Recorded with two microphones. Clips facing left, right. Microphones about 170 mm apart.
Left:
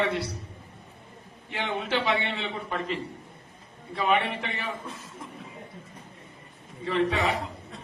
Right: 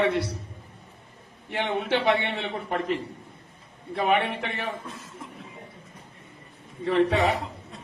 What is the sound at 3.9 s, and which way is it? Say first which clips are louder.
Speech: right 2 dB; 55° right (ahead or behind).